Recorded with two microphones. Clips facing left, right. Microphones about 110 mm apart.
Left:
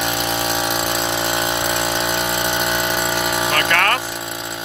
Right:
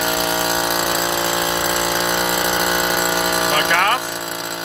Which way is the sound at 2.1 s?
25° right (ahead or behind).